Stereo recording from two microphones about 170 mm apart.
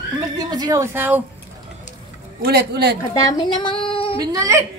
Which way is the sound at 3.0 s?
25° left (ahead or behind).